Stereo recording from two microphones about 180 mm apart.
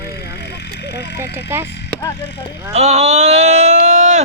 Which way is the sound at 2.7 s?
40° right (ahead or behind).